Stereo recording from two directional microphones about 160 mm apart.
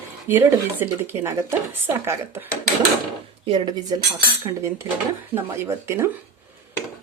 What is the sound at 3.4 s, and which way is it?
Speech, 30° right (ahead or behind).